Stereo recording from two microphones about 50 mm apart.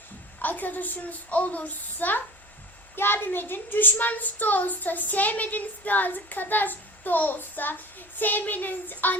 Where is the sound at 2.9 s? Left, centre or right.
Left.